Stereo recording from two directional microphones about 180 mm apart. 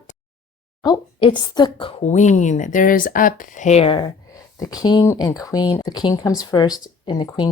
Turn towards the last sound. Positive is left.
turn(degrees=25)  # may be behind; listen again after turning